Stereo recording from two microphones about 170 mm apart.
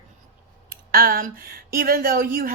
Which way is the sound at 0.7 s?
60° right (ahead or behind).